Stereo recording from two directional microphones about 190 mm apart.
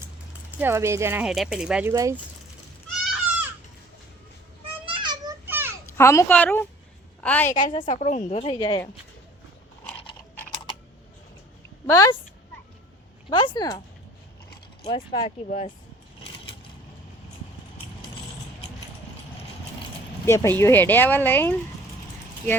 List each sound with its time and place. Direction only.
0.6 s speech: 15° right (ahead or behind)
1.9 s speech: 15° right (ahead or behind)
4.9 s a sound: 25° right (ahead or behind)
5.5 s a sound: 10° right (ahead or behind)
6.0 s speech: 15° left (ahead or behind)
7.5 s speech: 25° left (ahead or behind)
7.9 s a woman's voice: 40° left (ahead or behind)
11.9 s speech: 15° left (ahead or behind)
13.3 s speech: 25° left (ahead or behind)
14.8 s speech: 25° left (ahead or behind)
15.4 s speech: 45° left (ahead or behind)
20.2 s speech: 15° left (ahead or behind)